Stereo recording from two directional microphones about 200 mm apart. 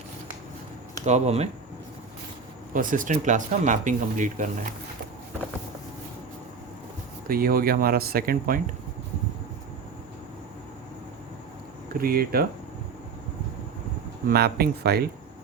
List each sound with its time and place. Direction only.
1.0 s speech: 35° right (ahead or behind)
2.7 s speech: 40° right (ahead or behind)
7.3 s speech: 45° right (ahead or behind)
11.9 s speech: 45° right (ahead or behind)
14.3 s speech: 50° right (ahead or behind)